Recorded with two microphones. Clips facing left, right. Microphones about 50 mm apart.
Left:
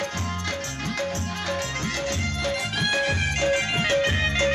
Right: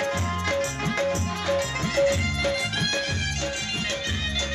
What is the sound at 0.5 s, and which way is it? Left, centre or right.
Music, centre.